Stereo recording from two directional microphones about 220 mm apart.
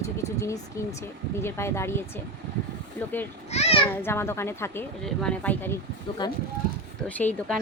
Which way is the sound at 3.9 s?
10° left (ahead or behind).